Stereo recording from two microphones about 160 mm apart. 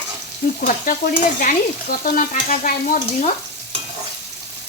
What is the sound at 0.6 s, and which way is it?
Frying, 55° left (ahead or behind).